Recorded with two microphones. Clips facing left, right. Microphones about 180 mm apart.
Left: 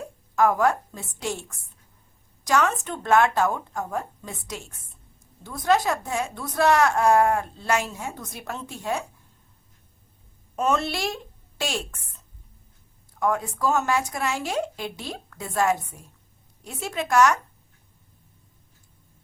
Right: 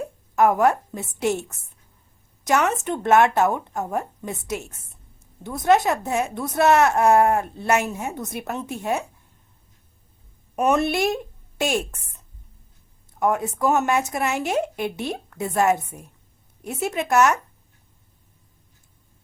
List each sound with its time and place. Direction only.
0.3 s speech: 20° right (ahead or behind)
10.5 s a woman's voice: 15° right (ahead or behind)
13.1 s speech: 20° right (ahead or behind)